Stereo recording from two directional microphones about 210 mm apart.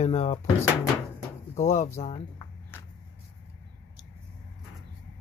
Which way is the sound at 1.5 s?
30° left (ahead or behind).